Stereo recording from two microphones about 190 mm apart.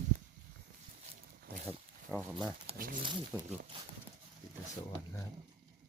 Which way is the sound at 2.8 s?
45° right (ahead or behind).